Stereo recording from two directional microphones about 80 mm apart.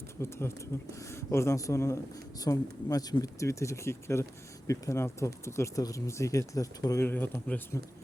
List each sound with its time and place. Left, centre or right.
0.2 s speech: left
2.4 s speech: left
7.0 s speech: left